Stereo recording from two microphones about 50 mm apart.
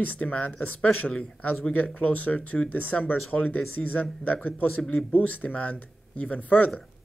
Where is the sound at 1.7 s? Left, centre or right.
Left.